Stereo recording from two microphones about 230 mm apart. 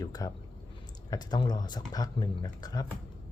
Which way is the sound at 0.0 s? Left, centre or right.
Centre.